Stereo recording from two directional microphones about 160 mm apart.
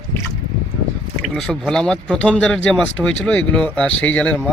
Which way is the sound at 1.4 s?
5° left (ahead or behind).